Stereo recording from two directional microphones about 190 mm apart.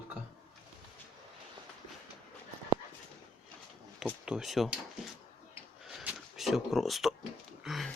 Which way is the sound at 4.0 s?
5° right (ahead or behind).